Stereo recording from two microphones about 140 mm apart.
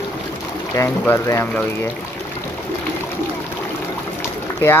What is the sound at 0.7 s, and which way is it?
Speech, 20° left (ahead or behind).